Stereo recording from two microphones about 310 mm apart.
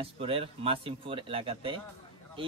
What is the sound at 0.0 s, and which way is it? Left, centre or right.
A man's voice, centre.